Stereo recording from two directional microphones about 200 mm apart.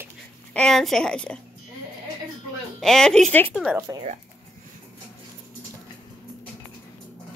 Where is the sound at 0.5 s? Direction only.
5° left (ahead or behind).